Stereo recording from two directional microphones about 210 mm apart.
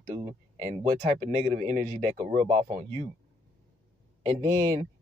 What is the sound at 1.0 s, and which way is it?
Speech, 35° right (ahead or behind).